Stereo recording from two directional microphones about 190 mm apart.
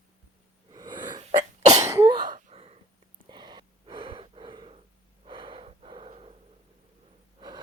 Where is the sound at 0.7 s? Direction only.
20° right (ahead or behind).